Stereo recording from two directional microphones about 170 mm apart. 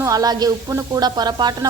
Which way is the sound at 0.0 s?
20° right (ahead or behind).